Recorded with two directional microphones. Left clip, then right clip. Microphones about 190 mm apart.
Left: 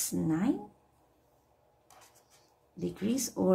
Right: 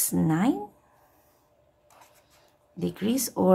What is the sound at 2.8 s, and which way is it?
Speech, 35° right (ahead or behind).